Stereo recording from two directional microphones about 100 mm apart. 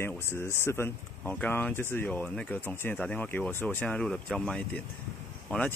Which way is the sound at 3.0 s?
10° left (ahead or behind).